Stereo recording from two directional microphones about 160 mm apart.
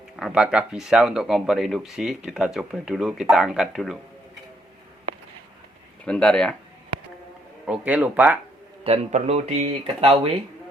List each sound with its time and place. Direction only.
0.2 s speech: 5° right (ahead or behind)
6.1 s speech: 5° left (ahead or behind)
7.7 s speech: 10° right (ahead or behind)
8.8 s speech: 40° right (ahead or behind)